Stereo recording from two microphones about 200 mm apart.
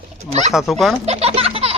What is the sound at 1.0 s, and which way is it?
Speech, 30° right (ahead or behind).